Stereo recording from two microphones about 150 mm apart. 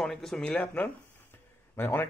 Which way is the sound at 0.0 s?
Centre (ahead or behind).